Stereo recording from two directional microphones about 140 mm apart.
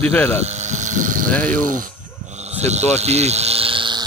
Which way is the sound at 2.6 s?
50° right (ahead or behind).